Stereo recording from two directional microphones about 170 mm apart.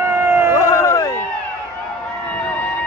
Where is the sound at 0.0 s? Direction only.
15° right (ahead or behind).